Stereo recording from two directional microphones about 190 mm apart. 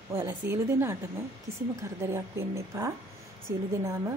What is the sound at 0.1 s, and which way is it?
Speech, 10° right (ahead or behind).